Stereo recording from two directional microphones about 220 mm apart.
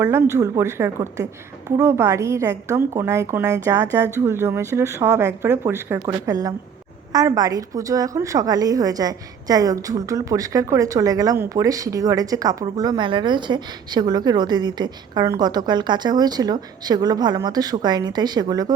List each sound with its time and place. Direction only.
0.0 s a woman's voice: 10° right (ahead or behind)